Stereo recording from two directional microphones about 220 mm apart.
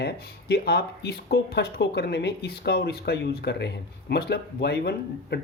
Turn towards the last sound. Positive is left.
turn(degrees=50)  # may be behind; listen again after turning